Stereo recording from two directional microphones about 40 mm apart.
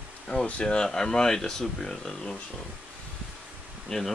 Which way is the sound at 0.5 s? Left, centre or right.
Left.